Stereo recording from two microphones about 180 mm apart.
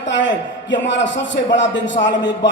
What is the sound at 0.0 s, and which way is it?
A man's voice, 90° left.